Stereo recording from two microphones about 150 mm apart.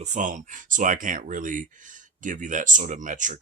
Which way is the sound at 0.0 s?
55° right (ahead or behind).